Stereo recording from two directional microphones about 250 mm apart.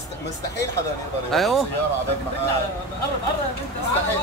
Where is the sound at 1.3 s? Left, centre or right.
Centre.